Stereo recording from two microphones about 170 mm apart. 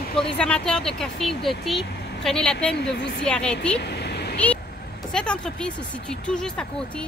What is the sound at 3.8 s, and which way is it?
Vehicle, 75° left (ahead or behind).